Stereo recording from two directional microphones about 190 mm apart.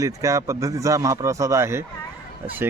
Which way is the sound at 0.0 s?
15° right (ahead or behind).